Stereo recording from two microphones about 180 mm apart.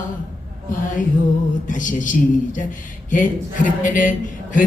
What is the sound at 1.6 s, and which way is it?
Speech, 45° left (ahead or behind).